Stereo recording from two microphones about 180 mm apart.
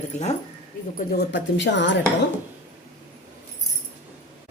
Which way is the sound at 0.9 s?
65° left (ahead or behind).